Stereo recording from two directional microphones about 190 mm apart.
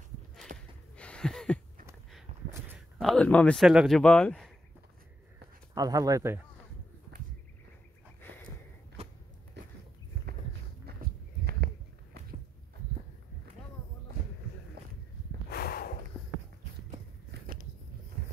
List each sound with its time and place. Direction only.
0.5 s gasp: 50° right (ahead or behind)
0.9 s a sound: 5° left (ahead or behind)
3.0 s speech: 5° left (ahead or behind)
5.8 s speech: 20° right (ahead or behind)
9.6 s walk: 65° right (ahead or behind)
10.9 s walk: 60° right (ahead or behind)
15.5 s snort: 55° left (ahead or behind)